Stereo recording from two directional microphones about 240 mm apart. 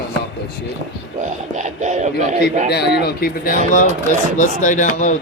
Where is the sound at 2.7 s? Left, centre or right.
Left.